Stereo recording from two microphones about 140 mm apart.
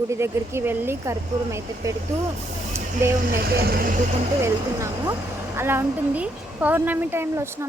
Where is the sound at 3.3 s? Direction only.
90° right.